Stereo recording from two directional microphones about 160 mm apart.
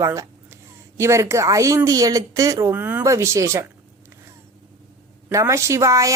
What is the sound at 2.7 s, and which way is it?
Speech, 10° right (ahead or behind).